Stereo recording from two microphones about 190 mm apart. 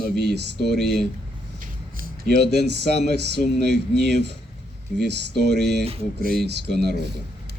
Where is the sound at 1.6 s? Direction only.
55° right (ahead or behind).